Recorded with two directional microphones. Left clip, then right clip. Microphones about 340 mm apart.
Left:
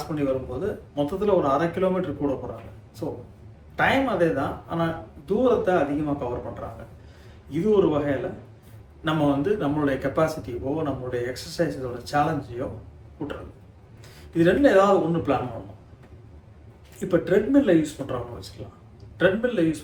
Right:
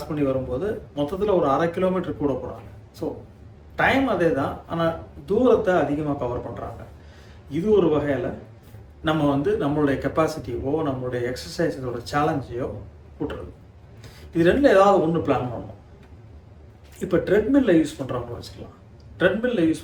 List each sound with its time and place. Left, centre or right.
0.1 s a man's voice: centre
14.3 s a man's voice: centre
17.0 s a man's voice: centre